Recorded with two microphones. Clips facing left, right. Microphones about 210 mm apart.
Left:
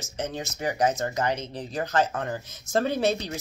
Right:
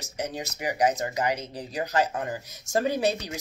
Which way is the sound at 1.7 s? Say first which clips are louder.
Left 1 dB; 10° right (ahead or behind).